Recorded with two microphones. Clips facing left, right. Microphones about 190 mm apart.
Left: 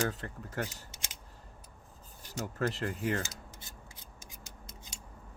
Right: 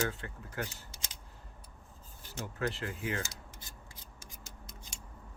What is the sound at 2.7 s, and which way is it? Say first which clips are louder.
Speech: left 4 dB; 40° left (ahead or behind).